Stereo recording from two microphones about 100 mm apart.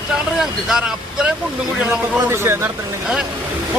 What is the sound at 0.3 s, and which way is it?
Speech, 5° right (ahead or behind).